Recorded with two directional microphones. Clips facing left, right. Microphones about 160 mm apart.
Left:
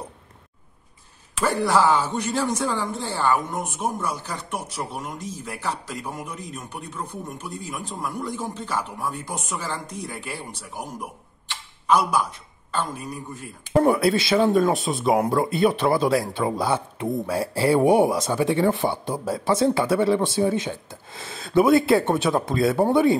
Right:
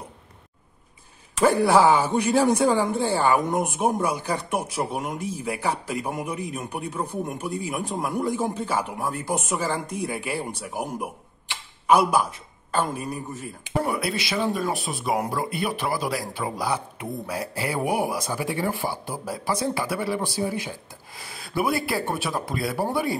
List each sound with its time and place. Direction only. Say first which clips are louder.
1.4 s a man's voice: right 3 dB; 10° right (ahead or behind)
13.8 s speech: left 8 dB; 25° left (ahead or behind)